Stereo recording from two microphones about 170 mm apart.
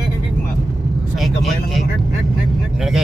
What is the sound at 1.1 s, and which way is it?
Speech, centre (ahead or behind).